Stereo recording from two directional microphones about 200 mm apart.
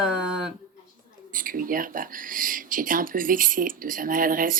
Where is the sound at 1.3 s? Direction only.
45° right (ahead or behind).